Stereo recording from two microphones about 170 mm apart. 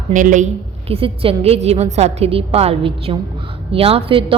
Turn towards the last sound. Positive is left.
turn(degrees=-30)  # may be behind; listen again after turning